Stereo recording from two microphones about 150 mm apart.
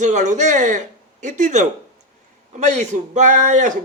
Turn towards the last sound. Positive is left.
turn(degrees=-55)  # may be behind; listen again after turning